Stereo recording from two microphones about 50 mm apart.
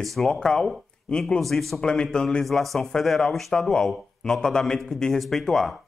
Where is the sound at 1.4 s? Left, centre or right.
Centre.